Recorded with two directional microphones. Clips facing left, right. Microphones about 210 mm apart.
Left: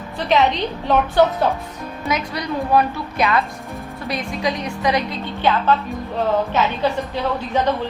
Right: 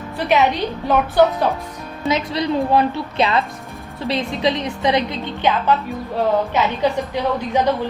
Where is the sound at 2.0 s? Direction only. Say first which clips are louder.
Right 4 dB; 25° right (ahead or behind).